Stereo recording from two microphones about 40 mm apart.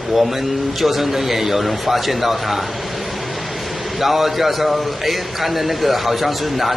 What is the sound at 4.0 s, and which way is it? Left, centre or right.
A man's voice, centre.